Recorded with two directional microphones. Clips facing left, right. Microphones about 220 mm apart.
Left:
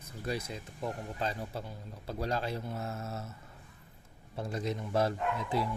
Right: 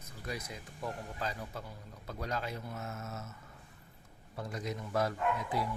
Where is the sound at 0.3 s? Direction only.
30° left (ahead or behind).